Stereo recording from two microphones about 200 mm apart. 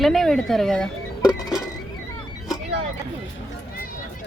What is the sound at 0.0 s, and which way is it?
Speech, centre (ahead or behind).